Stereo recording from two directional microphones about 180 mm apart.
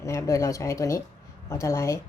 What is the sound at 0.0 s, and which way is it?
A woman's voice, 15° left (ahead or behind).